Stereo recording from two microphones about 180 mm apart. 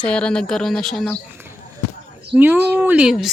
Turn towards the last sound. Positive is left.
turn(degrees=-5)  # may be behind; listen again after turning